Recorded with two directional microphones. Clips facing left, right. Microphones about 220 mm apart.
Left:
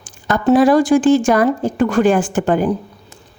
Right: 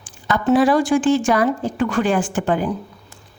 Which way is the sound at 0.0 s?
45° left (ahead or behind).